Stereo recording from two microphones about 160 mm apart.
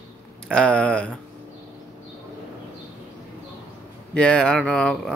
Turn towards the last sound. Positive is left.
turn(degrees=5)  # may be behind; listen again after turning